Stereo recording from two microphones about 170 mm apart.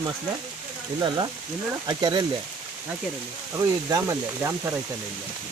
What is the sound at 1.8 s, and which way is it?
Speech, 25° right (ahead or behind).